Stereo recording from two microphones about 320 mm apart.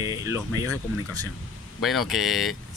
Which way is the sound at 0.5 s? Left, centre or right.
Left.